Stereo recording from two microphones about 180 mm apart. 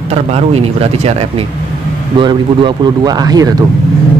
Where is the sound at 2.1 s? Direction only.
25° right (ahead or behind).